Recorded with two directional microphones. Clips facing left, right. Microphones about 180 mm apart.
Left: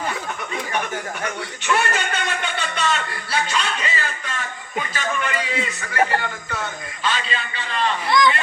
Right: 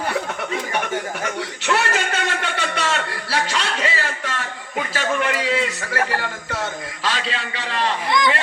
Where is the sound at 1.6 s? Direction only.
80° right.